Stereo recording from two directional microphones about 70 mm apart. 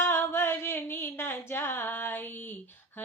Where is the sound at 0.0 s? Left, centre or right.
Left.